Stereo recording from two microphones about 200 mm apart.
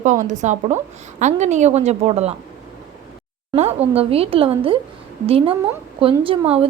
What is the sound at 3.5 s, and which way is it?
A woman's voice, 30° right (ahead or behind).